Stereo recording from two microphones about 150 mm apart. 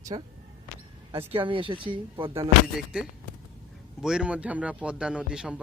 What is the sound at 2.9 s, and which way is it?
Speech, 5° right (ahead or behind).